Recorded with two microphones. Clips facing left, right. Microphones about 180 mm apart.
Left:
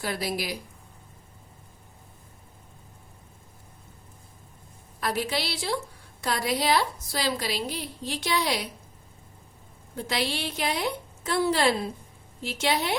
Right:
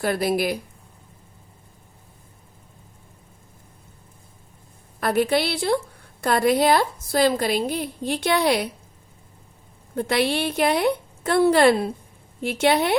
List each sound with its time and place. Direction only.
0.0 s a woman's voice: 55° right (ahead or behind)
4.9 s a woman's voice: 55° right (ahead or behind)
9.9 s a woman's voice: 55° right (ahead or behind)